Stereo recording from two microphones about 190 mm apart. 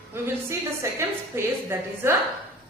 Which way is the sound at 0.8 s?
15° right (ahead or behind).